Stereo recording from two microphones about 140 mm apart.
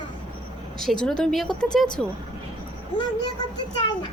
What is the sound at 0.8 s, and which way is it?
Speech, 5° left (ahead or behind).